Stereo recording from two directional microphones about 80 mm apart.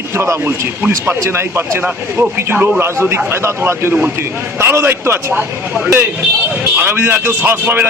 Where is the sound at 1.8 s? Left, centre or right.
Right.